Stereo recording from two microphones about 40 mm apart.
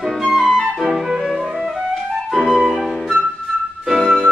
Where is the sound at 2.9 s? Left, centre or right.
Centre.